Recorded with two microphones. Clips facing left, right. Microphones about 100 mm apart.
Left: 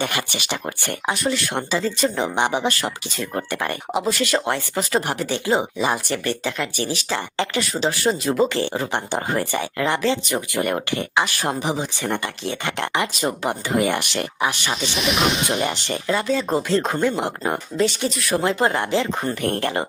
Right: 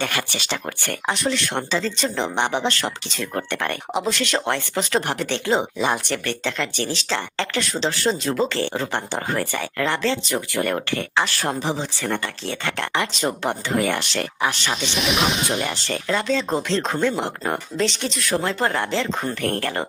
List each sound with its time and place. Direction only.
0.0 s speech: 15° left (ahead or behind)
1.1 s speech: 5° left (ahead or behind)
14.7 s speech: centre (ahead or behind)
15.6 s speech: 15° left (ahead or behind)